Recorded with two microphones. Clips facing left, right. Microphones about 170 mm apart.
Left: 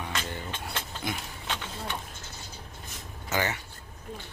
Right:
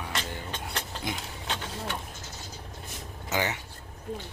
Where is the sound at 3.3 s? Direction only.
15° right (ahead or behind).